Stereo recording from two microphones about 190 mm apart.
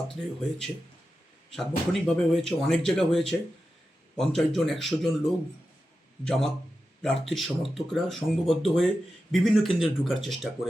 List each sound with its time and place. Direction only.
0.1 s speech: 5° left (ahead or behind)